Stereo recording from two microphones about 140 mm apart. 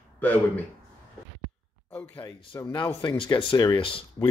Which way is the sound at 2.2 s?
35° left (ahead or behind).